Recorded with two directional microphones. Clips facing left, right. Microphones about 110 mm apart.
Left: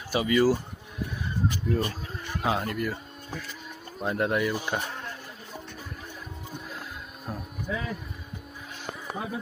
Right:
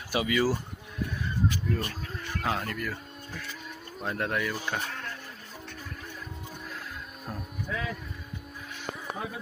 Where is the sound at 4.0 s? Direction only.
10° left (ahead or behind).